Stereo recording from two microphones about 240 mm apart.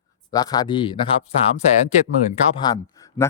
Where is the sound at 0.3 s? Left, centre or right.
Centre.